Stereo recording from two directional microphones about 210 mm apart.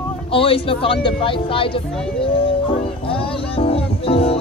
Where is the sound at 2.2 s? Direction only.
25° left (ahead or behind).